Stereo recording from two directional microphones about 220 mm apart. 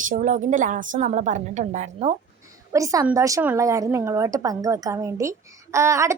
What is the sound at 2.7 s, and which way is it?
A woman's voice, 15° right (ahead or behind).